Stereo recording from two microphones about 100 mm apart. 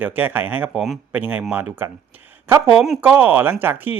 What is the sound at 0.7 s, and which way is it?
Speech, centre (ahead or behind).